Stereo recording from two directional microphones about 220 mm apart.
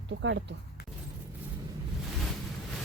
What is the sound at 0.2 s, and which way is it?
Speech, 60° right (ahead or behind).